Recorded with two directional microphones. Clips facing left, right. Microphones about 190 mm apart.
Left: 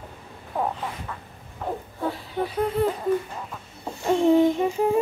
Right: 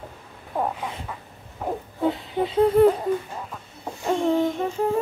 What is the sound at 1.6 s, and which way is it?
Speech, 20° right (ahead or behind).